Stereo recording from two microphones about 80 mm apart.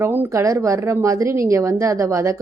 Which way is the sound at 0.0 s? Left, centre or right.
Right.